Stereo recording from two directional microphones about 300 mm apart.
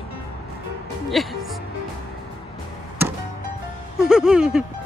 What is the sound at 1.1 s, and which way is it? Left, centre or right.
Music, centre.